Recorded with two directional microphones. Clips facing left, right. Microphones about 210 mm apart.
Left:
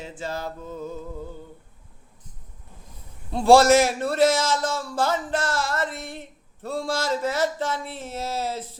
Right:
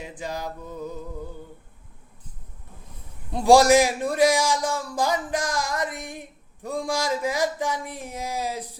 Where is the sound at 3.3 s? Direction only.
15° right (ahead or behind).